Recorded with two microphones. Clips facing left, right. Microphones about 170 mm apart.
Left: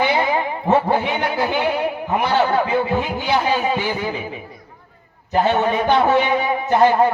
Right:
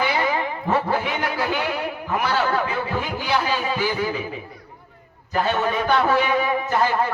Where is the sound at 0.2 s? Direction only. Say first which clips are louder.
Left 3 dB; 25° left (ahead or behind).